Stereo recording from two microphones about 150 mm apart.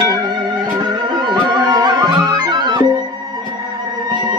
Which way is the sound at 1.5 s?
30° right (ahead or behind).